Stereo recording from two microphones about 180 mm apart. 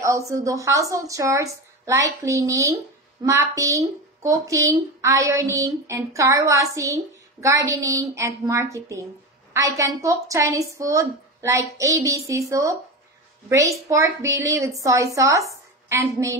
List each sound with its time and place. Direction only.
0.0 s a woman's voice: 15° right (ahead or behind)